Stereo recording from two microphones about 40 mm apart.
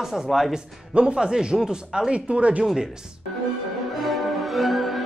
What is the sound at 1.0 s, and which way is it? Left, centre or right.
Speech, right.